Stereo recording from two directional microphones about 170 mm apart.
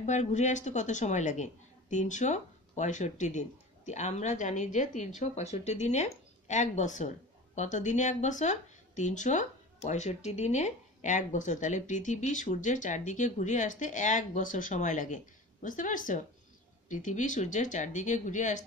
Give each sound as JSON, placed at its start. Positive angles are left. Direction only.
{"t": 0.0, "sound": "a woman's voice", "side_deg": 45}